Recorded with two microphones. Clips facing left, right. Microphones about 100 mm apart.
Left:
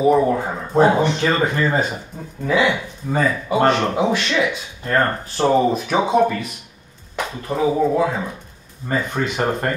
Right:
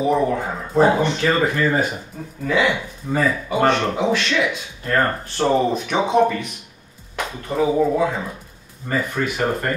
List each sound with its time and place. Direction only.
0.0 s speech: 5° left (ahead or behind)
1.4 s speech: 25° left (ahead or behind)
2.5 s speech: centre (ahead or behind)
9.1 s speech: 25° left (ahead or behind)